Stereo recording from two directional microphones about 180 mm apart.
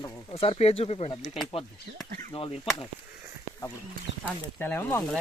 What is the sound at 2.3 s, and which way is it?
Speech, 30° left (ahead or behind).